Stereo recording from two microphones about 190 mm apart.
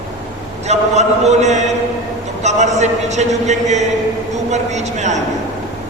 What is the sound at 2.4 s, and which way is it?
A man's voice, 35° right (ahead or behind).